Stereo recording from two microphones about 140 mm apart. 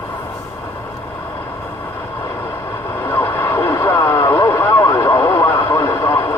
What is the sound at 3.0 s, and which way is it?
Radio, 15° left (ahead or behind).